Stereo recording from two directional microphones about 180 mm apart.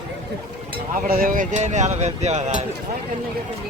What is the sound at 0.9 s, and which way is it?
Speech, 50° right (ahead or behind).